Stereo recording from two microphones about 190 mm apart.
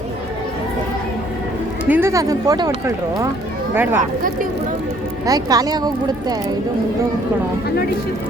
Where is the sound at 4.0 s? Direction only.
45° right (ahead or behind).